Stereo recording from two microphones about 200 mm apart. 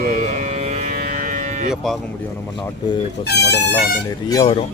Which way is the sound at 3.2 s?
55° left (ahead or behind).